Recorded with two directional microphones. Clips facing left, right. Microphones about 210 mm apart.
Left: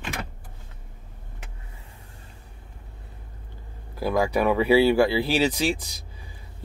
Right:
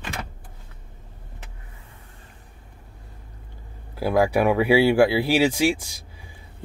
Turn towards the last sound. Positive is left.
turn(degrees=-15)  # may be behind; listen again after turning